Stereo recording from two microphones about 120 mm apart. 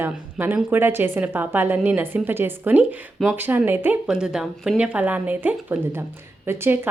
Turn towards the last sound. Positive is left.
turn(degrees=-20)  # may be behind; listen again after turning